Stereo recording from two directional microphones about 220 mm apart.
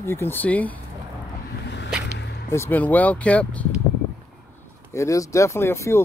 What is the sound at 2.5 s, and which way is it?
Speech, 10° left (ahead or behind).